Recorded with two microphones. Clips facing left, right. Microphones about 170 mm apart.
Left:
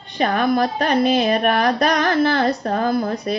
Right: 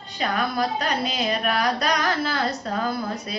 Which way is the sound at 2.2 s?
60° left (ahead or behind).